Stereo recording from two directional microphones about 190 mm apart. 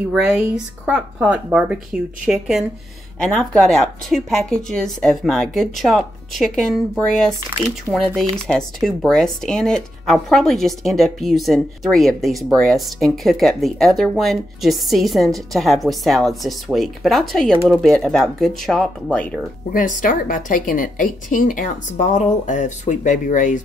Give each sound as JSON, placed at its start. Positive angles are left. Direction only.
{"t": 0.1, "sound": "speech", "side_deg": -5}
{"t": 20.0, "sound": "a woman's voice", "side_deg": 45}